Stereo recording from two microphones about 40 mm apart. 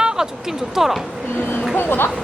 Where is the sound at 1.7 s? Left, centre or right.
Left.